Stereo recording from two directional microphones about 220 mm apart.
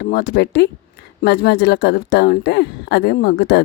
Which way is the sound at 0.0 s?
45° left (ahead or behind).